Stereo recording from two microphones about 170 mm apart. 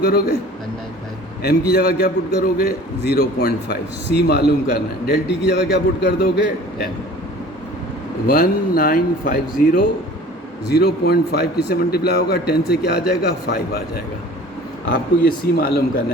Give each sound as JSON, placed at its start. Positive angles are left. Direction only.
{"t": 0.0, "sound": "a man's voice", "side_deg": 70}
{"t": 1.4, "sound": "a man's voice", "side_deg": 70}
{"t": 8.3, "sound": "a man's voice", "side_deg": 65}
{"t": 15.5, "sound": "a man's voice", "side_deg": 65}